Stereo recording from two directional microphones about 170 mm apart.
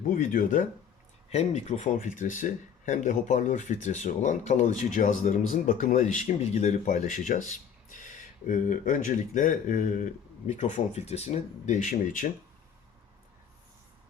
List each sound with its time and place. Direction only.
0.0 s speech: 50° left (ahead or behind)